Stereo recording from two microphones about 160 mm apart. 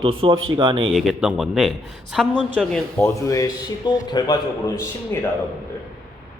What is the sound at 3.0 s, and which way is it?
A man's voice, 20° left (ahead or behind).